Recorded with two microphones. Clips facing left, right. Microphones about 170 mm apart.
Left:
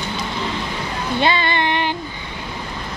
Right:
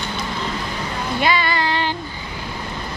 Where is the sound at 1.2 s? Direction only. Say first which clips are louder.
Left 1 dB; 25° left (ahead or behind).